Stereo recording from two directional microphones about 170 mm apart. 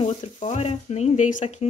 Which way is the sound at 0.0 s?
40° left (ahead or behind).